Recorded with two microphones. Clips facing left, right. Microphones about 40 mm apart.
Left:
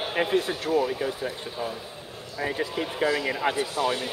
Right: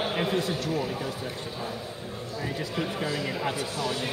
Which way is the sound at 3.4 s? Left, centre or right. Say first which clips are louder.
Left 4 dB; left.